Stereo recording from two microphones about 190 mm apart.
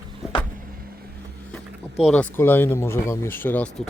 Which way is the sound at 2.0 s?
5° left (ahead or behind).